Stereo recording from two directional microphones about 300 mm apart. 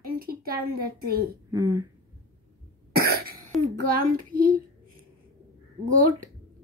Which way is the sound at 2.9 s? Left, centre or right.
Right.